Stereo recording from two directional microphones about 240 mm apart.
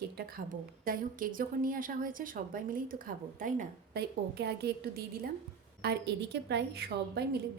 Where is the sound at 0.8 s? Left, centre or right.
Right.